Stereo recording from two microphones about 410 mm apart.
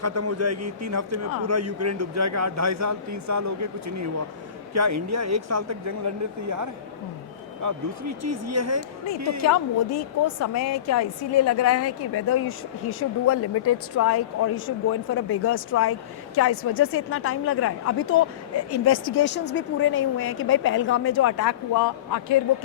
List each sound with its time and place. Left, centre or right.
0.0 s speech: right
9.4 s a woman's voice: left